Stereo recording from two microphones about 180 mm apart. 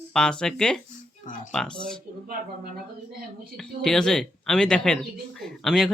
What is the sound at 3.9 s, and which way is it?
Speech, 5° left (ahead or behind).